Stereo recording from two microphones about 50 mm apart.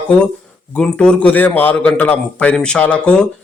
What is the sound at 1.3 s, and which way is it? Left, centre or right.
A man's voice, left.